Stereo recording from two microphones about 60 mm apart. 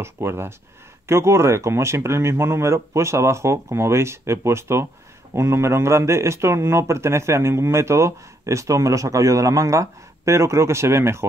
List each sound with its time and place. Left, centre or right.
0.0 s speech: right